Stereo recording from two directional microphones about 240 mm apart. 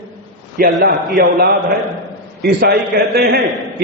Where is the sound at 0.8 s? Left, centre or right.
Right.